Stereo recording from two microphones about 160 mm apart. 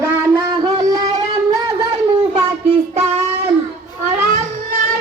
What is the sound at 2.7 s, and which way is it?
Child singing, 40° right (ahead or behind).